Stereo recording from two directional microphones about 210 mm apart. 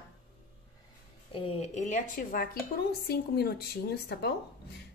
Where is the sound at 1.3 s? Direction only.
25° left (ahead or behind).